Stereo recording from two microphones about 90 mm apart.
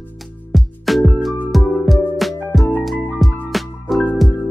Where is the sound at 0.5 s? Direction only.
Centre (ahead or behind).